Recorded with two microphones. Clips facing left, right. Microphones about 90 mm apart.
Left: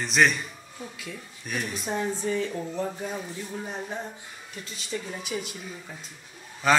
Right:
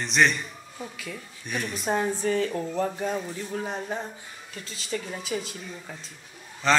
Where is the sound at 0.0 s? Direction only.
Centre (ahead or behind).